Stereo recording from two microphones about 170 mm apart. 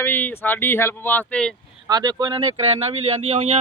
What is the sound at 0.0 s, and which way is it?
Speech, 10° left (ahead or behind).